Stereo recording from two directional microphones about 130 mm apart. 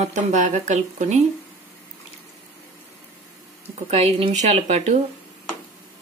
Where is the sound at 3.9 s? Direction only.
50° right (ahead or behind).